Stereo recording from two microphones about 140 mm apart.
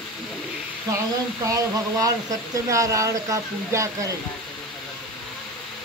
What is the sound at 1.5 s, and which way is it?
Speech, 25° right (ahead or behind).